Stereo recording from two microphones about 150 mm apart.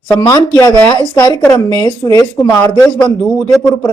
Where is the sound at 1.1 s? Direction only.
20° left (ahead or behind).